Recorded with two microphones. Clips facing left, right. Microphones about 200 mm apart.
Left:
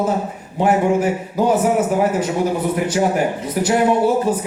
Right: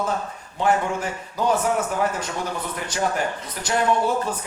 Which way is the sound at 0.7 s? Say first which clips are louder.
Left 5 dB; 20° left (ahead or behind).